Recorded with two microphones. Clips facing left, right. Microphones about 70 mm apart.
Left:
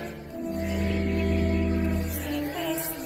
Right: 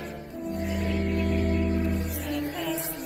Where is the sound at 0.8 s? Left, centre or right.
Right.